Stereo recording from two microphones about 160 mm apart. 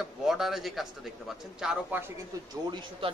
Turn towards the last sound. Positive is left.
turn(degrees=-30)  # may be behind; listen again after turning